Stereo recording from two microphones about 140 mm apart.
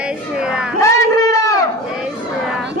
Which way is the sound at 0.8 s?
20° left (ahead or behind).